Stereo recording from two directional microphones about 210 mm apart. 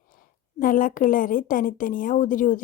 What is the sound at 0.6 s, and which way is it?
Speech, 40° left (ahead or behind).